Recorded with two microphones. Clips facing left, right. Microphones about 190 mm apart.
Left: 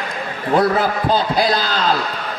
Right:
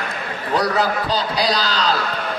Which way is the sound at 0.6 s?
50° left (ahead or behind).